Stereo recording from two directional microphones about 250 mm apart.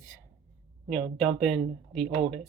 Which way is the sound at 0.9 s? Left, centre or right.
Centre.